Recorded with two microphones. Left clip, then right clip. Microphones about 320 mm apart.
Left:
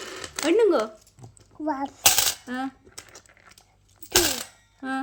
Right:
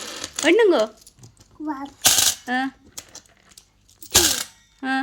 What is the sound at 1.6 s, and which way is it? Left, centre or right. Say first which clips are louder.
Speech: left 2 dB; left.